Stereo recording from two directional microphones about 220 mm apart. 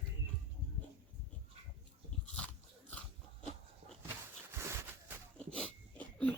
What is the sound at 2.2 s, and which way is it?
Biting, 5° left (ahead or behind).